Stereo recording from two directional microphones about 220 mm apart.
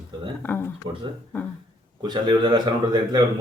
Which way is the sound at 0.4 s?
10° left (ahead or behind).